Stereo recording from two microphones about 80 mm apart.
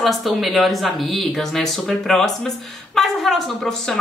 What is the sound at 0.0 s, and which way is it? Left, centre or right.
Speech, centre.